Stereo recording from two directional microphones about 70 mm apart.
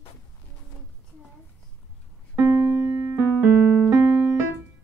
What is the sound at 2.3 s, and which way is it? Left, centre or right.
Keyboard, right.